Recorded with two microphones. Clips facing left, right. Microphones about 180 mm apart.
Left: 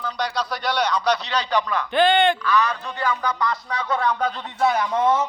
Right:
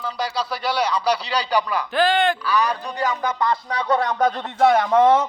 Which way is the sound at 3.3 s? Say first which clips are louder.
Right 3 dB; 30° right (ahead or behind).